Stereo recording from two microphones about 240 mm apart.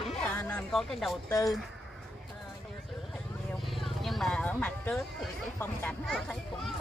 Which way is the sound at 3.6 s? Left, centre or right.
Centre.